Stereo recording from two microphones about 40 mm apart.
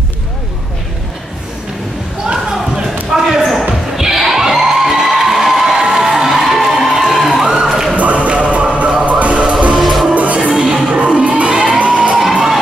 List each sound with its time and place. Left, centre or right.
2.2 s a sound: centre
3.9 s music: centre
7.6 s a sound: centre
7.9 s music: right
9.8 s music: centre
10.1 s music: right
10.4 s music: centre
10.9 s crowd: right
11.8 s music: right